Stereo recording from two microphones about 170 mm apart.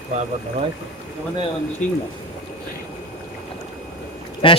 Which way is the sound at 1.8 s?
45° left (ahead or behind).